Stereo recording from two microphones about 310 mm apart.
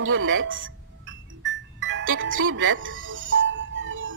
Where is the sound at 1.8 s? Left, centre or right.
Right.